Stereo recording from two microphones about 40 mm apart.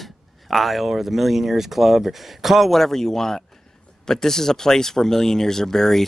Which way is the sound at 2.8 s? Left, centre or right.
Centre.